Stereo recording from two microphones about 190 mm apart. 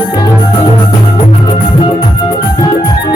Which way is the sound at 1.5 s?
25° left (ahead or behind).